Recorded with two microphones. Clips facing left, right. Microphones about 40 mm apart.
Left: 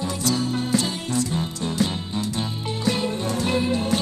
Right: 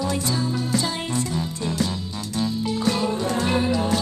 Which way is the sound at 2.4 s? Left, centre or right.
Left.